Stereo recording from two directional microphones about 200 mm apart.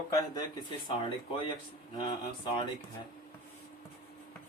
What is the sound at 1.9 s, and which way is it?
Speech, 20° left (ahead or behind).